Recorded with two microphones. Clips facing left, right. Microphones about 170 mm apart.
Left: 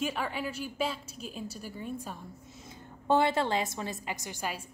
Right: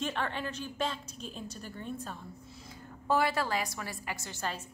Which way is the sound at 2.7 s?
25° left (ahead or behind).